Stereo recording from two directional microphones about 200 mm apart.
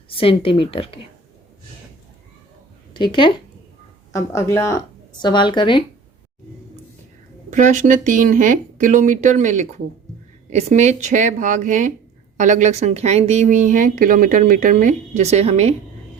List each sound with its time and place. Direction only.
0.1 s a woman's voice: 25° left (ahead or behind)
2.9 s a woman's voice: 25° left (ahead or behind)
7.5 s speech: 40° right (ahead or behind)